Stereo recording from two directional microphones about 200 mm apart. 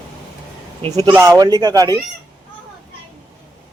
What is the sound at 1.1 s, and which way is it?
Speech, 15° right (ahead or behind).